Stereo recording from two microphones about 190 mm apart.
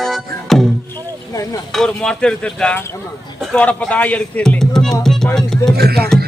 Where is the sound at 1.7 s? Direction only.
5° left (ahead or behind).